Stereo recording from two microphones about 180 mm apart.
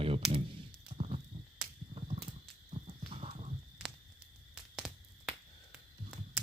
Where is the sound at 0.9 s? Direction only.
35° right (ahead or behind).